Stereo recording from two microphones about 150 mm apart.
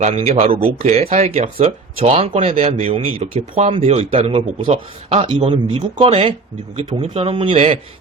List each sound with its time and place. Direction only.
0.0 s speech: 45° right (ahead or behind)